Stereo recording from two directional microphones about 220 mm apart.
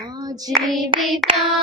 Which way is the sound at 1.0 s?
Centre (ahead or behind).